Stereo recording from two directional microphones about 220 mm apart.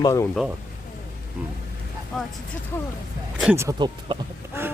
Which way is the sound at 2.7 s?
10° left (ahead or behind).